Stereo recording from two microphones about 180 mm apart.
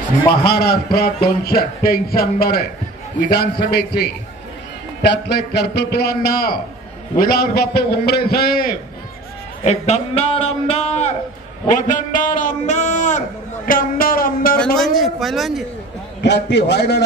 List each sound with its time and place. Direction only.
0.3 s a man's voice: 60° left (ahead or behind)
9.6 s a man's voice: 35° left (ahead or behind)
11.9 s speech: 45° left (ahead or behind)
14.6 s a man's voice: centre (ahead or behind)
16.2 s a man's voice: 70° left (ahead or behind)